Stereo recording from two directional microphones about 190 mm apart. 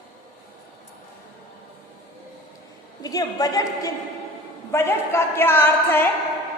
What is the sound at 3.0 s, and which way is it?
A woman's voice, 20° left (ahead or behind).